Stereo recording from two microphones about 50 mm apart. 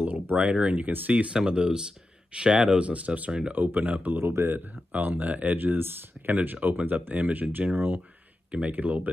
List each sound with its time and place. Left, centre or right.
0.0 s a sound: right
0.4 s speech: right
3.5 s speech: right
4.3 s speech: right
4.9 s speech: right
6.3 s speech: right
8.5 s speech: right
8.7 s speech: right